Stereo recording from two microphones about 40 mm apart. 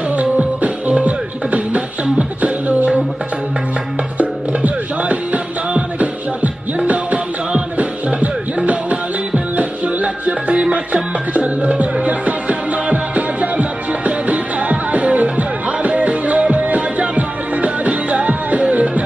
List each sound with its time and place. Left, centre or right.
0.1 s music: right
2.1 s beatboxing: right
4.2 s music: right